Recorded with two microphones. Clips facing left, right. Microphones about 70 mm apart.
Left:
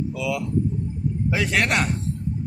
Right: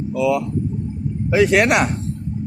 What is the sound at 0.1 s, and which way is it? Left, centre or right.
Speech, right.